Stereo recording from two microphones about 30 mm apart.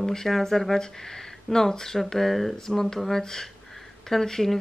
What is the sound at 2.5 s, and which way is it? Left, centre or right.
Speech, centre.